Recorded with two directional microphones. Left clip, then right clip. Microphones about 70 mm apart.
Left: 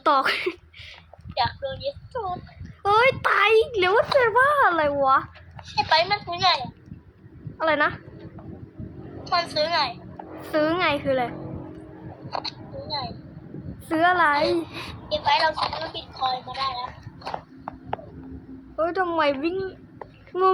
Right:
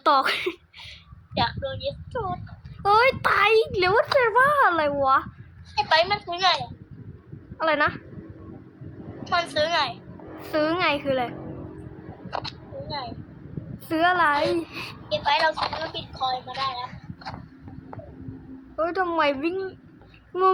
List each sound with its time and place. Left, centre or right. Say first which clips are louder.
0.0 s a woman's voice: even; centre
1.3 s speech: even; right
2.8 s a woman's voice: even; centre
5.7 s speech: even; right
7.6 s a woman's voice: left 1 dB; centre
9.2 s speech: even; right
10.3 s a woman's voice: left 1 dB; centre
12.3 s a sound: left 1 dB; right
13.8 s a woman's voice: left 1 dB; centre
15.1 s speech: left 1 dB; right
18.8 s speech: even; centre